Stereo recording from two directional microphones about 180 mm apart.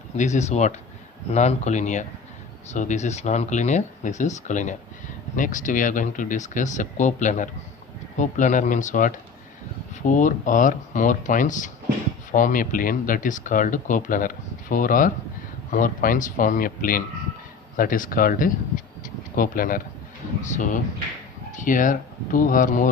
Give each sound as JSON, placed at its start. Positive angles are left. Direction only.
{"t": 0.2, "sound": "speech", "side_deg": 40}